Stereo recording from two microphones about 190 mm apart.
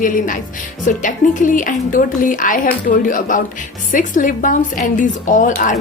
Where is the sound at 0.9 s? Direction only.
45° left (ahead or behind).